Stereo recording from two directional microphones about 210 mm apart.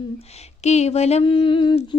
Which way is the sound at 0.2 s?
30° left (ahead or behind).